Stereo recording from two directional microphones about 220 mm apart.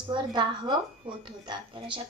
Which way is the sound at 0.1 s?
20° right (ahead or behind).